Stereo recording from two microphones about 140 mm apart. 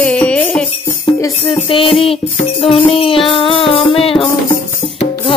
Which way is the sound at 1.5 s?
40° left (ahead or behind).